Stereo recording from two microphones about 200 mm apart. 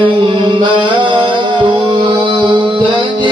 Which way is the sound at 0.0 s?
25° right (ahead or behind).